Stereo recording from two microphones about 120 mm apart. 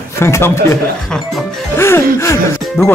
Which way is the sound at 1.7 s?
20° left (ahead or behind).